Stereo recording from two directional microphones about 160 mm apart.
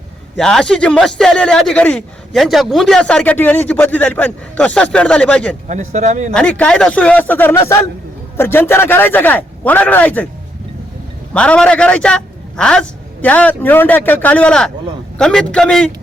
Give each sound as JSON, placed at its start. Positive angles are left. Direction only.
{"t": 0.3, "sound": "a man's voice", "side_deg": 5}
{"t": 5.6, "sound": "speech", "side_deg": -50}
{"t": 6.3, "sound": "a man's voice", "side_deg": 5}
{"t": 11.3, "sound": "a man's voice", "side_deg": 5}